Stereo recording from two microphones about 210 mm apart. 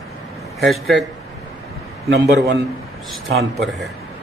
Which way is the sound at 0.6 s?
Centre (ahead or behind).